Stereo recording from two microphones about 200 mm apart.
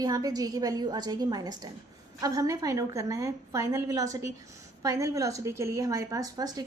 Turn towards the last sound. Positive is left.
turn(degrees=-20)  # may be behind; listen again after turning